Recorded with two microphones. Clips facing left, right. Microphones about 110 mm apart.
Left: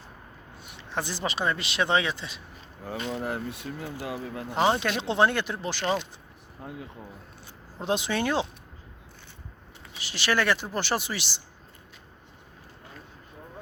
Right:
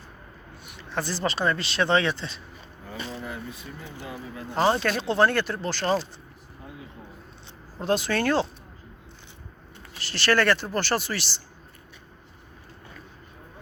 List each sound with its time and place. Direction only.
0.8 s speech: 15° left (ahead or behind)
2.8 s speech: 75° left (ahead or behind)
4.5 s speech: 15° left (ahead or behind)
5.8 s speech: 40° right (ahead or behind)
7.8 s speech: 15° left (ahead or behind)
10.0 s speech: 15° left (ahead or behind)